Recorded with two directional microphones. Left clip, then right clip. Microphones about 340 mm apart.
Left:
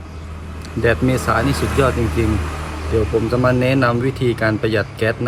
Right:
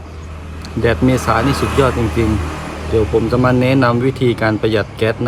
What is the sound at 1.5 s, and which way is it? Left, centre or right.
Speech, right.